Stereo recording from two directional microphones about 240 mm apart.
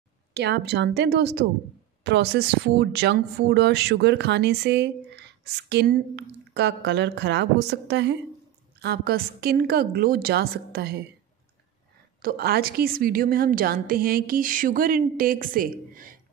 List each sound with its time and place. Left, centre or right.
0.3 s a woman's voice: right
12.2 s a woman's voice: right